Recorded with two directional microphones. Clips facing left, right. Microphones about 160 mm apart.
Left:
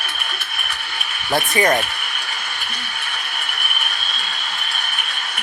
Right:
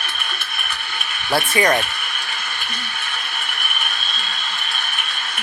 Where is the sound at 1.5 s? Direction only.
20° left (ahead or behind).